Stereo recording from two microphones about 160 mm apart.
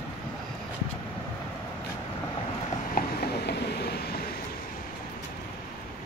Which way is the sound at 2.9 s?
85° left.